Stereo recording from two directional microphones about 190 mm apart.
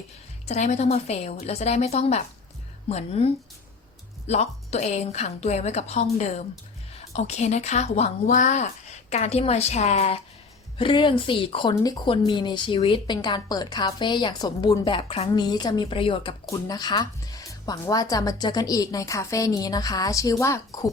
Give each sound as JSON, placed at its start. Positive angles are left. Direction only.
{"t": 0.4, "sound": "a woman's voice", "side_deg": 35}
{"t": 4.3, "sound": "a woman's voice", "side_deg": 35}